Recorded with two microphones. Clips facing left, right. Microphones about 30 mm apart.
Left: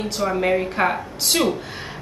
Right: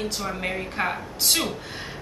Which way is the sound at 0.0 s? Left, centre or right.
Centre.